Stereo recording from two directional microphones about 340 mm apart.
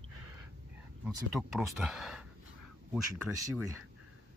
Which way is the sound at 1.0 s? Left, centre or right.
Centre.